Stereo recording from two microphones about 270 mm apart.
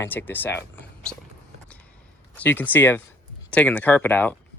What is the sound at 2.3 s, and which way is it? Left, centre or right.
Speech, centre.